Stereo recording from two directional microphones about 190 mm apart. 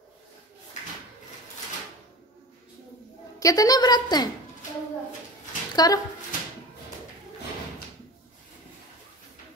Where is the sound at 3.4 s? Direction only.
20° left (ahead or behind).